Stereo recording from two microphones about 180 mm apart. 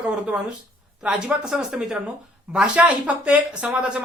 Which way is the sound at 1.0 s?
5° right (ahead or behind).